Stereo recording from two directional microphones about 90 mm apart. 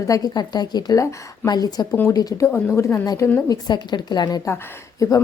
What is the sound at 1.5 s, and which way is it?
A woman's voice, 50° left (ahead or behind).